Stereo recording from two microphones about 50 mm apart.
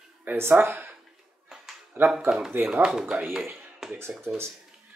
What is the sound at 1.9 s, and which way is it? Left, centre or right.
Speech, right.